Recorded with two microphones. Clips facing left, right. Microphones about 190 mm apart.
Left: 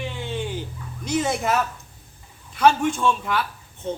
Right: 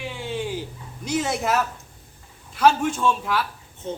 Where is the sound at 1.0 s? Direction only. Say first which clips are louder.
Left 1 dB; 5° right (ahead or behind).